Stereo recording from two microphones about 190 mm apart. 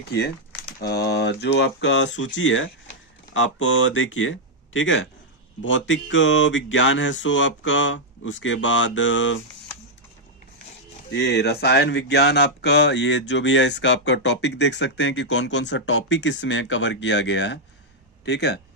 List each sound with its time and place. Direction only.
0.8 s speech: 55° left (ahead or behind); by 5.0 s 90° left
5.6 s speech: 75° left (ahead or behind)
11.1 s speech: 60° left (ahead or behind)